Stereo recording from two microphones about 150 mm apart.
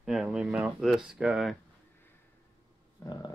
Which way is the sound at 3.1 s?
30° left (ahead or behind).